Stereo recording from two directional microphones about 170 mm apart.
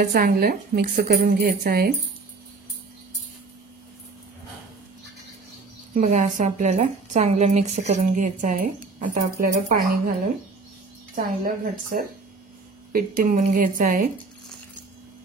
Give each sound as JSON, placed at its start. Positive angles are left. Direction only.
{"t": 0.1, "sound": "a woman's voice", "side_deg": -60}
{"t": 5.9, "sound": "a woman's voice", "side_deg": -45}
{"t": 11.4, "sound": "a woman's voice", "side_deg": -55}